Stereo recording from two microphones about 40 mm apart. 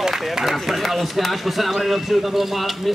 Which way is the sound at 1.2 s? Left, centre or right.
Centre.